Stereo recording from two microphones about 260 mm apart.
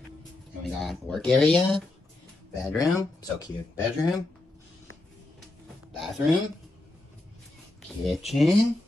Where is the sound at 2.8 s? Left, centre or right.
Centre.